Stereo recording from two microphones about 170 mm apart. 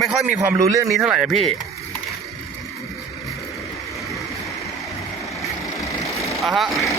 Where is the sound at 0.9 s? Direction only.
5° right (ahead or behind).